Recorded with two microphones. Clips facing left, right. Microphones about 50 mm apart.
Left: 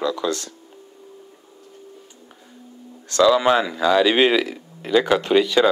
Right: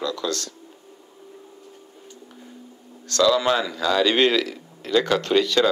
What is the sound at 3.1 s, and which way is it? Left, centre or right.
Speech, centre.